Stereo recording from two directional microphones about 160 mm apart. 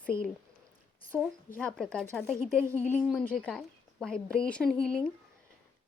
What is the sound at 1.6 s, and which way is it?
A woman's voice, 5° left (ahead or behind).